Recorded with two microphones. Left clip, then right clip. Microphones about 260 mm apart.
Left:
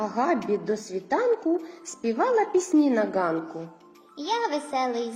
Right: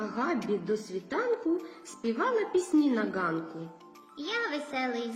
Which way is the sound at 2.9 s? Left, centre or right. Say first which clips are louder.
Left 6 dB; centre.